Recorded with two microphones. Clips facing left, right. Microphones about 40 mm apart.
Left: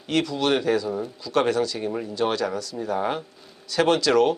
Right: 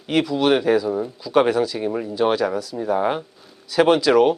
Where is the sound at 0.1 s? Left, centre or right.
Centre.